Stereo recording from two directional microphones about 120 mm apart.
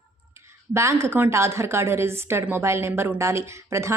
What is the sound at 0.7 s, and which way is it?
A woman's voice, 20° right (ahead or behind).